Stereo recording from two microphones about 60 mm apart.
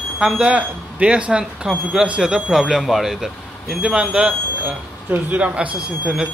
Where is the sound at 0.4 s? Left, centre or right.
Right; by 3.8 s centre.